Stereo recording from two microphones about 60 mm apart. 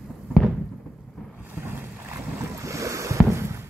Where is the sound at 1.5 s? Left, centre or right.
Right.